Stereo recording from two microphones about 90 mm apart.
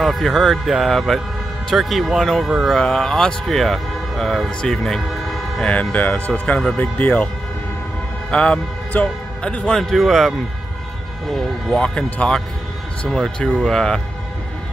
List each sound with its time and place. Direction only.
0.0 s speech: centre (ahead or behind); by 7.2 s 20° left (ahead or behind)
8.3 s a man's voice: 10° left (ahead or behind)
11.3 s speech: 10° left (ahead or behind)